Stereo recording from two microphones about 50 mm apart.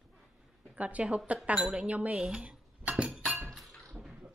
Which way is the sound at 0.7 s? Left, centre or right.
Right.